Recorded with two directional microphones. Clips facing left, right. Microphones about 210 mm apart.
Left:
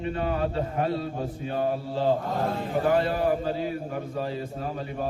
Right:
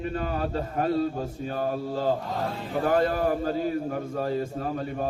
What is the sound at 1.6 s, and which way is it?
A man's voice, 45° right (ahead or behind).